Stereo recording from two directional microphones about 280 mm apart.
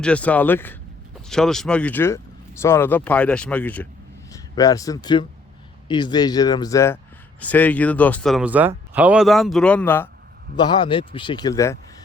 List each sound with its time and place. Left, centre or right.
0.0 s a man's voice: centre